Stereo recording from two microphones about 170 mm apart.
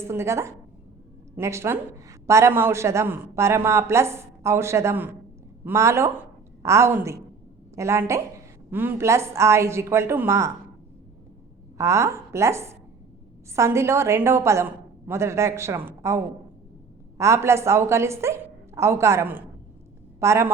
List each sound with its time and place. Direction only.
0.1 s a woman's voice: 15° right (ahead or behind)
11.8 s a woman's voice: 15° right (ahead or behind)